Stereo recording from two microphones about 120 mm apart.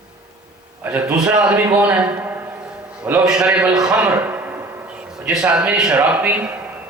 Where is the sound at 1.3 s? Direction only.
10° right (ahead or behind).